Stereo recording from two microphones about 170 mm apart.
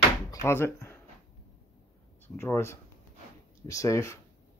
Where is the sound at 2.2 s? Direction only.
15° left (ahead or behind).